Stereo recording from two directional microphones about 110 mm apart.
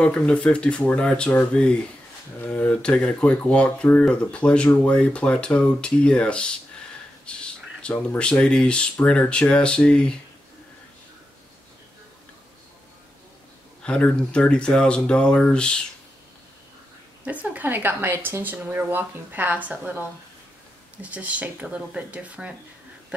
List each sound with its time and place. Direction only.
0.0 s speech: 10° left (ahead or behind)
13.8 s speech: 10° left (ahead or behind)
17.2 s speech: 15° right (ahead or behind)
21.0 s speech: 15° right (ahead or behind)